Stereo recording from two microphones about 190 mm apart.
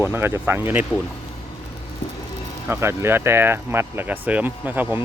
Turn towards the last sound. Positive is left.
turn(degrees=-10)  # may be behind; listen again after turning